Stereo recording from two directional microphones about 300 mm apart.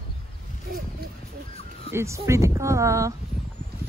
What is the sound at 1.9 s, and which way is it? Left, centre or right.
Speech, centre.